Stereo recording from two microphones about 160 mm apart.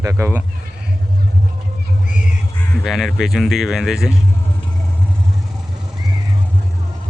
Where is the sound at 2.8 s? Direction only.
Centre (ahead or behind).